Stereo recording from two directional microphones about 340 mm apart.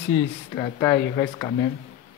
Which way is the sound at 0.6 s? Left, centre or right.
Centre.